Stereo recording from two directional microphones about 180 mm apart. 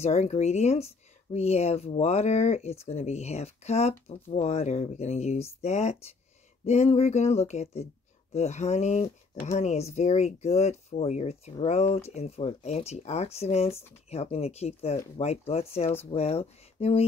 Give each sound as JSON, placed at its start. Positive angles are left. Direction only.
{"t": 0.0, "sound": "speech", "side_deg": 35}